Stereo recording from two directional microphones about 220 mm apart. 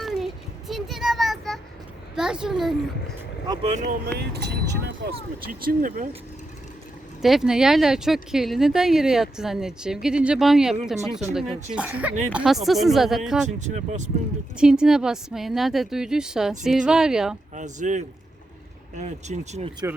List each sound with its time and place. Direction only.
0.0 s a sound: centre (ahead or behind)
2.1 s speech: 5° right (ahead or behind)
3.7 s speech: 35° right (ahead or behind)
4.2 s speech: 50° right (ahead or behind)
7.2 s speech: centre (ahead or behind)
13.6 s speech: 35° right (ahead or behind)
14.6 s speech: 5° right (ahead or behind)
17.5 s speech: 35° right (ahead or behind)